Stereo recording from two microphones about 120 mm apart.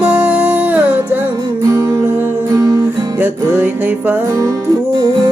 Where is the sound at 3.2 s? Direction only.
15° right (ahead or behind).